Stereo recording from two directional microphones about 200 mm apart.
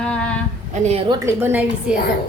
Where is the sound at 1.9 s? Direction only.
5° right (ahead or behind).